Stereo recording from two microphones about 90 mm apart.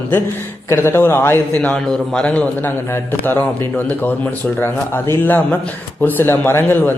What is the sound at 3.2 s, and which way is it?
Speech, 20° left (ahead or behind).